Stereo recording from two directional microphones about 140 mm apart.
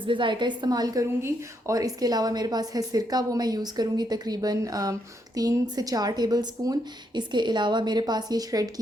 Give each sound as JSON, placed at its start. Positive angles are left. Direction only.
{"t": 0.1, "sound": "a woman's voice", "side_deg": -35}